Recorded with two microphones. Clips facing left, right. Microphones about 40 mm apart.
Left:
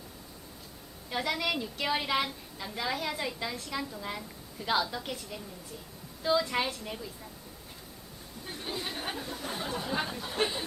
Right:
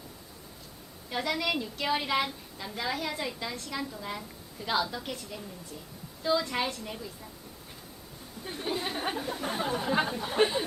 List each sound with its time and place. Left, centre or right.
1.1 s a woman's voice: centre
8.7 s speech: centre
9.4 s speech: right